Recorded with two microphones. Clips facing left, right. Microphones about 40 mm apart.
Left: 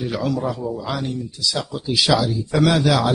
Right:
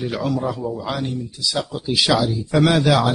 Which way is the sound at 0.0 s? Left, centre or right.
Centre.